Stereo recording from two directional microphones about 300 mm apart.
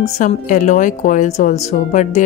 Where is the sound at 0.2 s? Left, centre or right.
Left.